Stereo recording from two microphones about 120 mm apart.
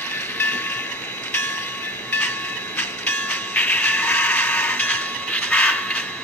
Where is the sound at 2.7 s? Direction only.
15° left (ahead or behind).